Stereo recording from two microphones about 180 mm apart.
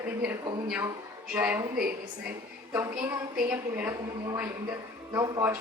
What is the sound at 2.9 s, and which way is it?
A woman's voice, 5° right (ahead or behind).